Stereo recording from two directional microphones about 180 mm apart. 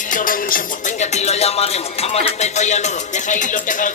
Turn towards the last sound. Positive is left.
turn(degrees=45)  # may be behind; listen again after turning